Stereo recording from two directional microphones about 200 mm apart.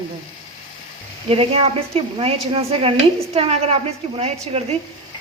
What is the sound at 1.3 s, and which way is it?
A woman's voice, 30° right (ahead or behind).